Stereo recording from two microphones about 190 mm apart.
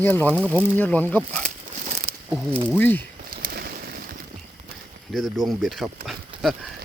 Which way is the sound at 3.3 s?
50° right (ahead or behind).